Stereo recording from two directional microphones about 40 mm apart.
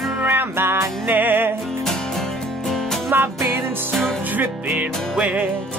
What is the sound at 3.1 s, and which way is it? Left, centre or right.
Music, right.